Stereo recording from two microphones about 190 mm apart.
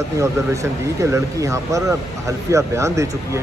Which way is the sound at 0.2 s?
15° right (ahead or behind).